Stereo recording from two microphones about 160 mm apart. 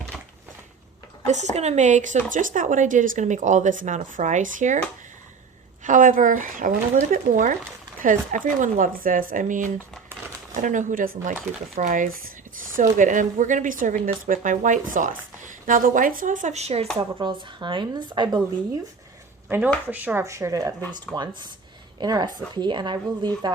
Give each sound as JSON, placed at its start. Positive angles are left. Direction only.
{"t": 0.1, "sound": "a sound", "side_deg": 0}
{"t": 1.3, "sound": "speech", "side_deg": -45}
{"t": 5.8, "sound": "speech", "side_deg": -55}
{"t": 17.0, "sound": "speech", "side_deg": -30}
{"t": 19.5, "sound": "speech", "side_deg": -10}
{"t": 22.0, "sound": "speech", "side_deg": -25}